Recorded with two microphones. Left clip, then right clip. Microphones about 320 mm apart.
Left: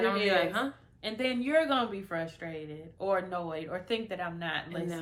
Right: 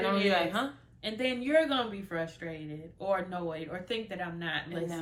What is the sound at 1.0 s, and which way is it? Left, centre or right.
A woman's voice, centre.